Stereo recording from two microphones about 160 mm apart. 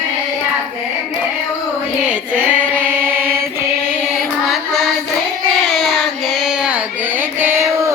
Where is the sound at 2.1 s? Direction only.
10° right (ahead or behind).